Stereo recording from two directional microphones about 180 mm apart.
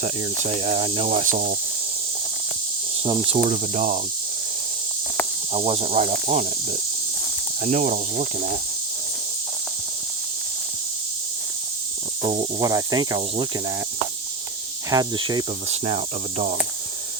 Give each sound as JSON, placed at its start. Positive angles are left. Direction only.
{"t": 0.2, "sound": "cricket", "side_deg": -35}
{"t": 3.0, "sound": "cricket", "side_deg": -30}
{"t": 3.4, "sound": "speech", "side_deg": -45}
{"t": 5.5, "sound": "cricket", "side_deg": -35}
{"t": 7.6, "sound": "cricket", "side_deg": -40}
{"t": 12.2, "sound": "cricket", "side_deg": -30}
{"t": 14.8, "sound": "cricket", "side_deg": -20}